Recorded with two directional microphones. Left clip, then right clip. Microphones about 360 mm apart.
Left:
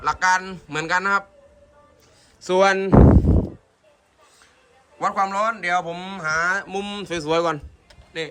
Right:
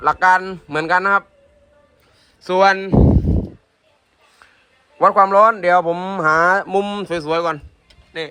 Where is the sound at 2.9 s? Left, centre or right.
Centre.